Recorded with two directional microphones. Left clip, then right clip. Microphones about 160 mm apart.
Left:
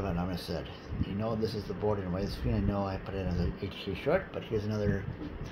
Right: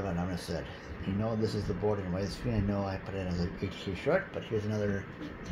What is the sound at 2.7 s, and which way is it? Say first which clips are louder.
Speech: left 1 dB; 5° right (ahead or behind).